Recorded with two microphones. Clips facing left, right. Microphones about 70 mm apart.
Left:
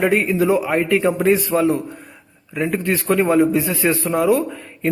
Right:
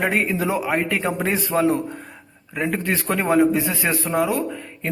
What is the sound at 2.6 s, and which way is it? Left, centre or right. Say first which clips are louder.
A man's voice: left 3 dB; right.